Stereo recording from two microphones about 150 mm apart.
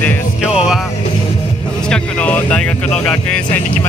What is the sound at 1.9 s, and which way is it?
Speech, 10° left (ahead or behind).